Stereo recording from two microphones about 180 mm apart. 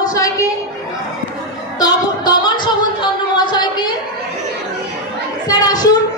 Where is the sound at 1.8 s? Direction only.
20° left (ahead or behind).